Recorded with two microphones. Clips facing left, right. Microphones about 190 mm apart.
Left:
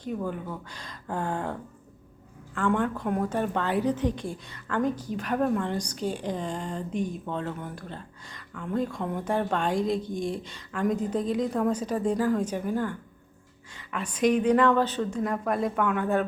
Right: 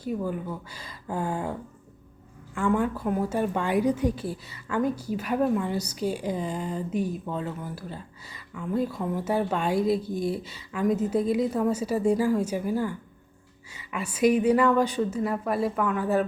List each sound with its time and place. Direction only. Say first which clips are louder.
0.0 s a woman's voice: right 2 dB; 5° right (ahead or behind)
2.6 s a woman's voice: right 1 dB; 5° right (ahead or behind)